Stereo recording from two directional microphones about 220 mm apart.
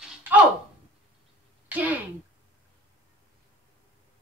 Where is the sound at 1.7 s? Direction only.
5° right (ahead or behind).